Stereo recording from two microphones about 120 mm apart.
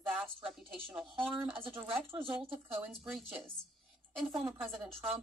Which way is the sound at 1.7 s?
Centre (ahead or behind).